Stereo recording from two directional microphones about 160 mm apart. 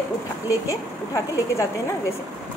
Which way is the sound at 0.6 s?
20° left (ahead or behind).